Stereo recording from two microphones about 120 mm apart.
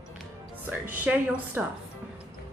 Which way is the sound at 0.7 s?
15° right (ahead or behind).